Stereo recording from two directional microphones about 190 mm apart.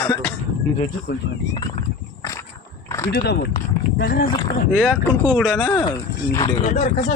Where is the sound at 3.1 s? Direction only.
55° left (ahead or behind).